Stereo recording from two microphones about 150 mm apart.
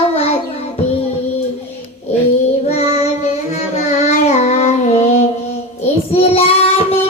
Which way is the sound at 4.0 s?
50° left (ahead or behind).